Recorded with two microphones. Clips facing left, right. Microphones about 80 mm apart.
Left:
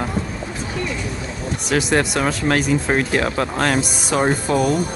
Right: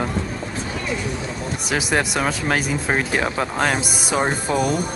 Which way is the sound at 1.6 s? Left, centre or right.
Centre.